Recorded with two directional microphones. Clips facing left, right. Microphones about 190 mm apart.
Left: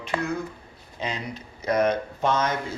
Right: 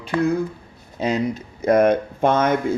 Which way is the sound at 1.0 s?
45° right (ahead or behind).